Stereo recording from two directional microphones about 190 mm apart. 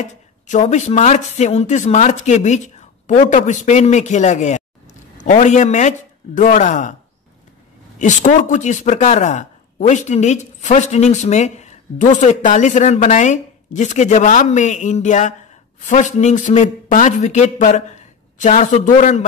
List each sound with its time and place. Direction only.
0.1 s a woman's voice: 40° left (ahead or behind)
8.0 s speech: 40° left (ahead or behind)